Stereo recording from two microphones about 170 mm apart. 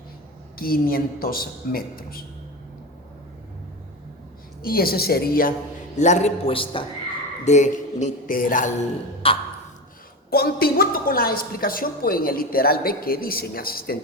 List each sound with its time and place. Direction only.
0.6 s a woman's voice: 60° left (ahead or behind)
4.6 s a woman's voice: 60° left (ahead or behind)
6.0 s a man's voice: 45° left (ahead or behind)
7.4 s speech: 45° left (ahead or behind)
9.2 s a man's voice: 30° left (ahead or behind)
10.2 s a woman's voice: 65° left (ahead or behind)